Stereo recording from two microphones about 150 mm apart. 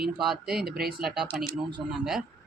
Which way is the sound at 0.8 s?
90° right.